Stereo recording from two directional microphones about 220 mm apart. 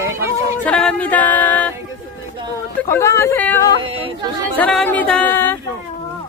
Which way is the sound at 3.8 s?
25° right (ahead or behind).